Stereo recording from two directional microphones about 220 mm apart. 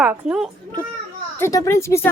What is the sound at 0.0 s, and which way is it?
Speech, 5° right (ahead or behind).